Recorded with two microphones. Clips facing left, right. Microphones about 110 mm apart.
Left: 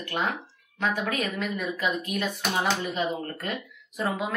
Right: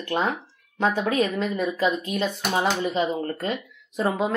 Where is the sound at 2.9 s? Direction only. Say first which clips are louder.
Right 5 dB; 25° right (ahead or behind).